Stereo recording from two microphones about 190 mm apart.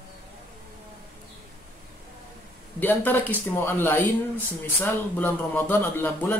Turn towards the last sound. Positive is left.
turn(degrees=10)  # may be behind; listen again after turning